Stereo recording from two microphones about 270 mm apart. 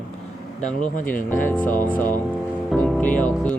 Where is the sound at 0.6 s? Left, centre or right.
Left.